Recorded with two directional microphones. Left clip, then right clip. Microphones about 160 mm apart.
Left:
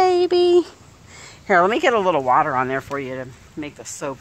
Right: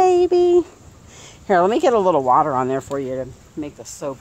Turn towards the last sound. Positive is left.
turn(degrees=0)  # may be behind; listen again after turning